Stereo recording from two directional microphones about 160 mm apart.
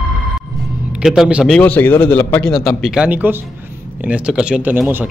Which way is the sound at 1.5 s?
10° left (ahead or behind).